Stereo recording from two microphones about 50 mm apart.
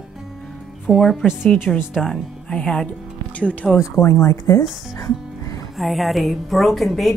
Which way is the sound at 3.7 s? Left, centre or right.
Left.